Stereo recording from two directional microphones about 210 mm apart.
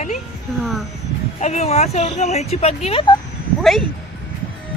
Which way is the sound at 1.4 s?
30° left (ahead or behind).